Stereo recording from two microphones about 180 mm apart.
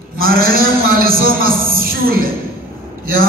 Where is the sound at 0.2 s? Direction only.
55° right (ahead or behind).